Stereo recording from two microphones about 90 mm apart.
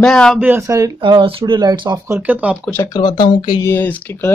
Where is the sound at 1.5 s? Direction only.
55° right (ahead or behind).